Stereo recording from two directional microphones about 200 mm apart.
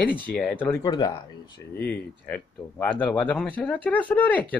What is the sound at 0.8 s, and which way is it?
Speech, 20° left (ahead or behind).